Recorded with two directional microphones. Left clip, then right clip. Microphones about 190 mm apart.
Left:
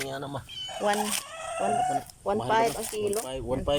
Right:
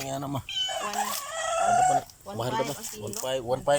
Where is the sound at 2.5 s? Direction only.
55° left (ahead or behind).